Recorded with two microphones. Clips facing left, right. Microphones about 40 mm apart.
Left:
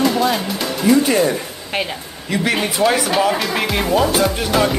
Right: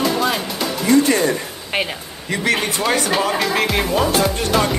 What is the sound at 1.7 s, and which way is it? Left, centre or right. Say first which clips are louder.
Speech: right 1 dB; centre.